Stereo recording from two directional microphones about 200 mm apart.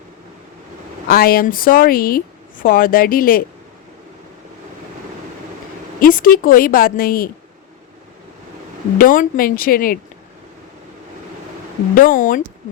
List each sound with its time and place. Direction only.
1.0 s speech: 50° left (ahead or behind)
6.0 s speech: 45° left (ahead or behind)
9.0 s speech: 45° left (ahead or behind)
11.9 s speech: 40° left (ahead or behind)